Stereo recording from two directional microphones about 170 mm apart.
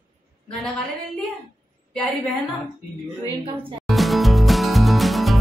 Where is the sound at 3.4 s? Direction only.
30° right (ahead or behind).